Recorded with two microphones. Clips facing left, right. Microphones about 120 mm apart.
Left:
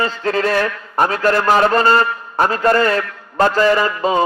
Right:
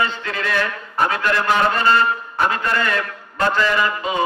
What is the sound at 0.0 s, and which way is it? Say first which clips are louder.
A man's voice: left 5 dB; 35° left (ahead or behind).